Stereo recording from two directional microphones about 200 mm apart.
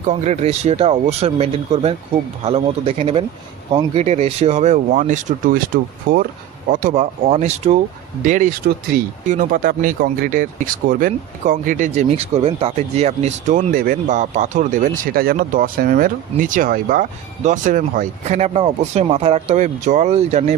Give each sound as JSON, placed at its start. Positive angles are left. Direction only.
{"t": 0.1, "sound": "speech", "side_deg": -30}